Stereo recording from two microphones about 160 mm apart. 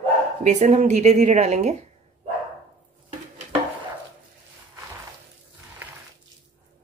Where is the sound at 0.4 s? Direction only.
45° right (ahead or behind).